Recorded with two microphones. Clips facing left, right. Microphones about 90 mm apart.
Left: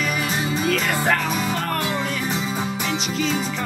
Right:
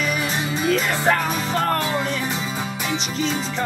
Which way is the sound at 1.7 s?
30° right (ahead or behind).